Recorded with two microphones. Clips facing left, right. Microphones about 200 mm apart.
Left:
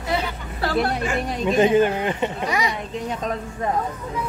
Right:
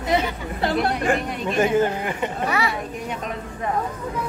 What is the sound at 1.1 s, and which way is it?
Speech, 55° right (ahead or behind).